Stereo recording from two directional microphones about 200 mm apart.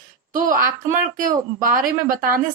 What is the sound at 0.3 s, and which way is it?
A woman's voice, 40° right (ahead or behind).